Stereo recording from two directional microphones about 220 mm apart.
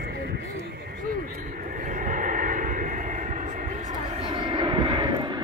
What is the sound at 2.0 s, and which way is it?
Vehicle, 35° right (ahead or behind).